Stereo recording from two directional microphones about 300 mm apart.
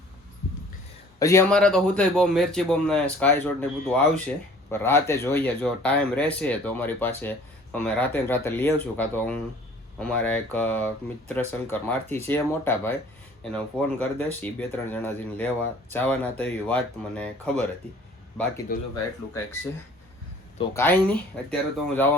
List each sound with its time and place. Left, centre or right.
1.2 s speech: centre
14.0 s speech: centre
18.7 s speech: left
20.6 s speech: centre